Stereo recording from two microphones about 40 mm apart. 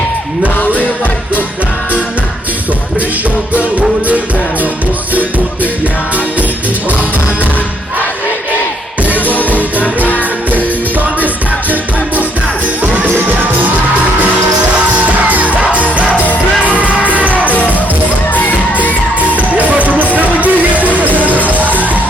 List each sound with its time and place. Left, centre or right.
3.8 s music: right
9.8 s music: left
14.8 s music: right
19.3 s music: right